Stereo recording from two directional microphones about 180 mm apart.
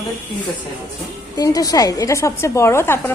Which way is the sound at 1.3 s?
20° left (ahead or behind).